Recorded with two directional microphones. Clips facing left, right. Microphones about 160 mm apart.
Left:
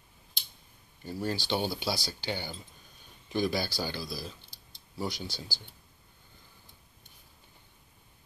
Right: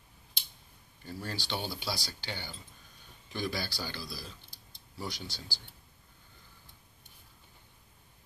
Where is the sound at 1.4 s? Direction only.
15° left (ahead or behind).